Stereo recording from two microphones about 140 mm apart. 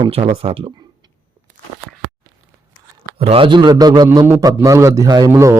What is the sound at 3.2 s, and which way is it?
A man's voice, 40° right (ahead or behind).